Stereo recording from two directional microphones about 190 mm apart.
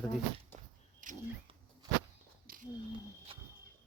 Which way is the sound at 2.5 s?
50° right (ahead or behind).